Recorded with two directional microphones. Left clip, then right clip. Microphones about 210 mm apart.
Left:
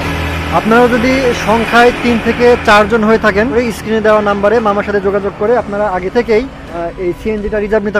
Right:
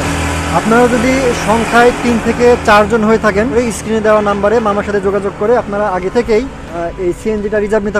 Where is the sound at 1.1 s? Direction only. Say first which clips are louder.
Left 1 dB; 25° right (ahead or behind).